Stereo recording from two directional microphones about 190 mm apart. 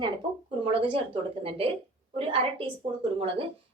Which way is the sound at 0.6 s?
25° right (ahead or behind).